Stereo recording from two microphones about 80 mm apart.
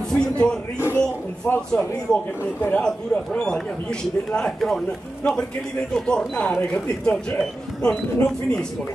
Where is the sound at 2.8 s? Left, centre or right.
Centre.